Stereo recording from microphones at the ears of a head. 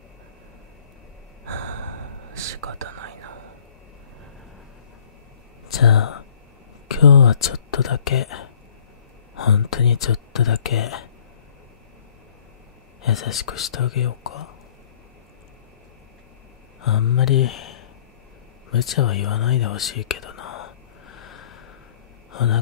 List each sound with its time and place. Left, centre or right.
1.4 s gasp: right
2.3 s whispering: right
5.7 s whispering: left
6.9 s speech: left
13.0 s speech: left
16.8 s speech: left
18.7 s whispering: left